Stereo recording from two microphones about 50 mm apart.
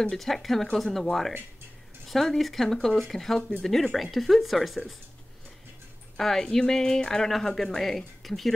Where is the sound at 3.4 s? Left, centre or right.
Left.